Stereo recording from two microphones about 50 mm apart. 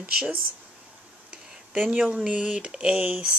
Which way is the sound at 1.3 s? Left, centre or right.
Right.